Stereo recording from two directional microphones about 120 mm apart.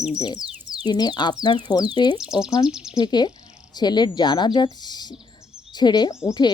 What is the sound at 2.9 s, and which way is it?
Speech, 35° left (ahead or behind).